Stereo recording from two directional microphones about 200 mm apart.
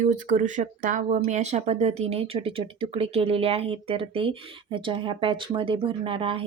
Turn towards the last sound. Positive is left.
turn(degrees=-25)  # may be behind; listen again after turning